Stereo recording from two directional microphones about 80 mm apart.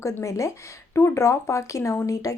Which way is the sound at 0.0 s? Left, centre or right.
Left.